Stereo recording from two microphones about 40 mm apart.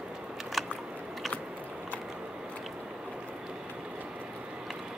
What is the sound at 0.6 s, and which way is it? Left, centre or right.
Biting, centre.